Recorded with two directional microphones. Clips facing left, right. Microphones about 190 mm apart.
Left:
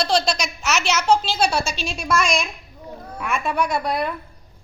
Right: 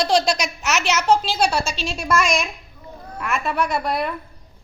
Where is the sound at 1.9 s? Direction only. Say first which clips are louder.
Right 1 dB; 5° right (ahead or behind).